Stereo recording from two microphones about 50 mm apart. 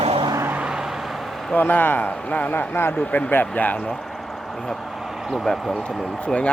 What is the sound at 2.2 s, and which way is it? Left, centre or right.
Speech, left.